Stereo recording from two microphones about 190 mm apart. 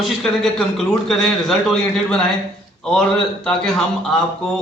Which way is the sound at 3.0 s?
5° left (ahead or behind).